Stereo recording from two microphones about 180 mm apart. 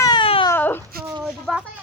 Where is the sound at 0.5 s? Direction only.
10° left (ahead or behind).